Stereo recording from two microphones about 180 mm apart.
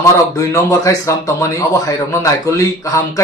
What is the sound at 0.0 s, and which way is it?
Speech, 20° left (ahead or behind).